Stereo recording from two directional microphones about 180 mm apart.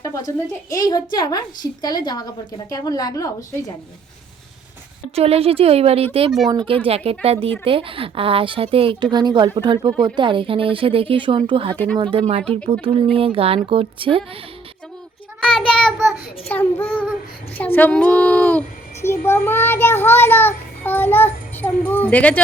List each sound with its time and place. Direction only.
0.0 s a sound: 20° left (ahead or behind)
0.7 s a woman's voice: 20° left (ahead or behind)
5.1 s a woman's voice: 35° right (ahead or behind)
15.4 s child singing: centre (ahead or behind)
16.5 s a child's voice: 10° left (ahead or behind)